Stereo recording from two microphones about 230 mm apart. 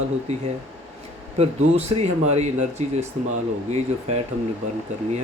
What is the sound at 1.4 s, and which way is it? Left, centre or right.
Speech, right.